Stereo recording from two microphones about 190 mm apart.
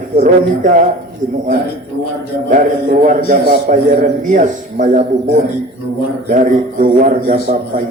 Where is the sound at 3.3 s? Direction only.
45° right (ahead or behind).